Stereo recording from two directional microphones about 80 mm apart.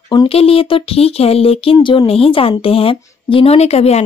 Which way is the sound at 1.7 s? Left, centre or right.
Left.